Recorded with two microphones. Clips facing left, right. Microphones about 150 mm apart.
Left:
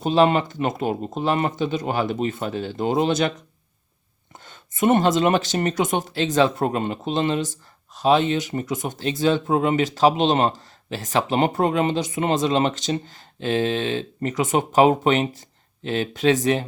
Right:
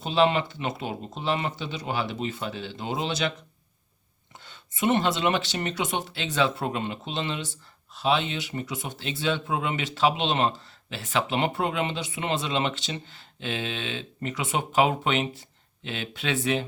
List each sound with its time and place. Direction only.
0.0 s speech: 45° left (ahead or behind)
4.4 s speech: 45° left (ahead or behind)